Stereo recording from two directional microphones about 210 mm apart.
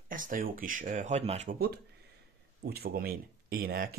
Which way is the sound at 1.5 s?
45° right (ahead or behind).